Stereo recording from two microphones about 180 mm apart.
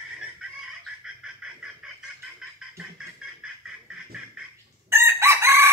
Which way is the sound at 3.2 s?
5° right (ahead or behind).